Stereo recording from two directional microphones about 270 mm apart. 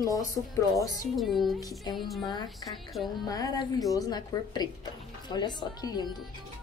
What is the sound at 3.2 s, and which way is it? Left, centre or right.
A woman's voice, centre.